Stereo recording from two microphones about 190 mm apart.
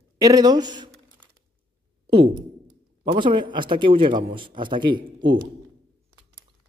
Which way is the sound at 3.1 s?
25° right (ahead or behind).